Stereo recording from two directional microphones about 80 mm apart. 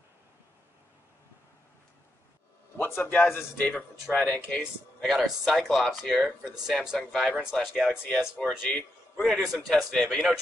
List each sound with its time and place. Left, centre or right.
2.8 s speech: left
4.6 s speech: centre